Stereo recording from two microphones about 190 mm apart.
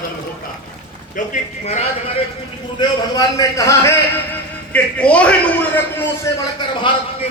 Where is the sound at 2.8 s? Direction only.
20° left (ahead or behind).